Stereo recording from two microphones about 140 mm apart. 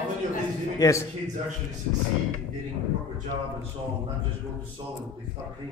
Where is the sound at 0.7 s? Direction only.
20° left (ahead or behind).